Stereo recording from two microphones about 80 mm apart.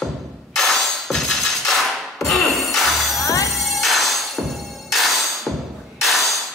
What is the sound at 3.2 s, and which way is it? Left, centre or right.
Music, left.